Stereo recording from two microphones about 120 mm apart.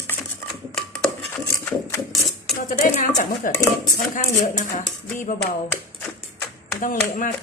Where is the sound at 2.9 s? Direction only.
90° left.